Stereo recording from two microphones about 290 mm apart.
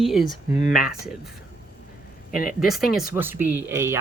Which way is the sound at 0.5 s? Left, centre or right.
Left.